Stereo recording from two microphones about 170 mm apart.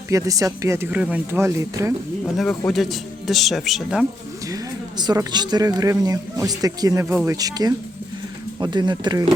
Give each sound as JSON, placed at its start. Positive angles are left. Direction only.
{"t": 0.1, "sound": "speech", "side_deg": -20}
{"t": 2.4, "sound": "speech", "side_deg": 5}
{"t": 4.4, "sound": "speech", "side_deg": -20}